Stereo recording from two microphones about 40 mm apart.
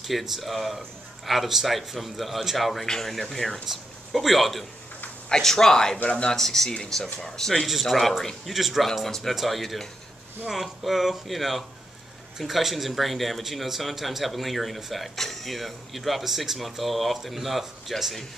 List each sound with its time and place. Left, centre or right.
0.0 s speech: centre
5.3 s speech: centre
6.0 s speech: left
6.3 s speech: centre
7.6 s speech: centre
8.2 s speech: centre
8.5 s speech: centre
8.8 s speech: centre